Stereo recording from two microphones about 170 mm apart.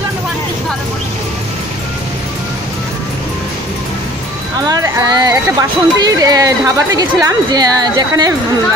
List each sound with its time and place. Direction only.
4.6 s speech: 20° right (ahead or behind)